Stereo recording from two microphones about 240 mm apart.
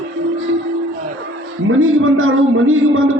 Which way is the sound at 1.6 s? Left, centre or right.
Right.